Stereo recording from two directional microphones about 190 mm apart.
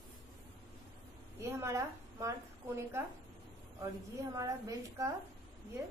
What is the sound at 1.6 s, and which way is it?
Speech, 15° right (ahead or behind).